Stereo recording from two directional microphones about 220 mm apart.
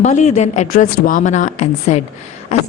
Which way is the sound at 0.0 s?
30° left (ahead or behind).